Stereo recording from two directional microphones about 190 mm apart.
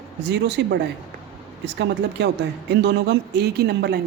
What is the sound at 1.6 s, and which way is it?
Speech, 65° right (ahead or behind).